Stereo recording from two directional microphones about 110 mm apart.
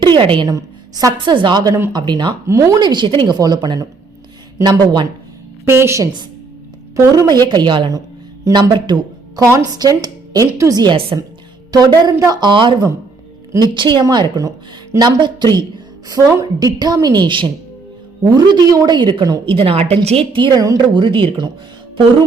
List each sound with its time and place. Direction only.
0.0 s a woman's voice: 50° right (ahead or behind)
0.4 s a woman's voice: 30° right (ahead or behind)
1.2 s a woman's voice: 45° right (ahead or behind)
2.5 s a woman's voice: 30° right (ahead or behind)
2.8 s a woman's voice: 45° right (ahead or behind)
5.6 s a woman's voice: 25° right (ahead or behind)
6.9 s a woman's voice: 35° right (ahead or behind)
9.4 s a woman's voice: 30° right (ahead or behind); by 19.5 s 45° right (ahead or behind)
19.5 s a woman's voice: 60° right (ahead or behind)
20.3 s a woman's voice: 45° right (ahead or behind)
21.0 s a woman's voice: 45° right (ahead or behind)